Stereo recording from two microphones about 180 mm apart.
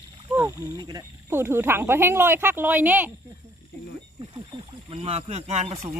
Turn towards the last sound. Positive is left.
turn(degrees=-35)  # may be behind; listen again after turning